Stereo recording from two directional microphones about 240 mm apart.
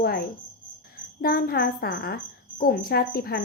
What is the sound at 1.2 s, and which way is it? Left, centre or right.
A woman's voice, left.